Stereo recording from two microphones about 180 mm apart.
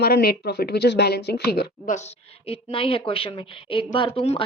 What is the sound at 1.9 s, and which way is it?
Speech, 45° left (ahead or behind).